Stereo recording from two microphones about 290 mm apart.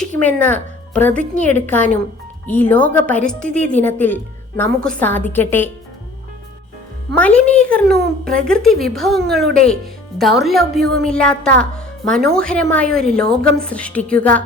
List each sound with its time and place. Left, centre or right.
0.0 s a woman's voice: centre
7.2 s a woman's voice: centre
7.9 s speech: right
8.4 s a woman's voice: centre